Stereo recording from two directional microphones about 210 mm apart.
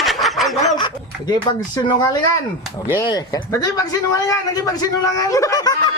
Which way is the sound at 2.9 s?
15° left (ahead or behind).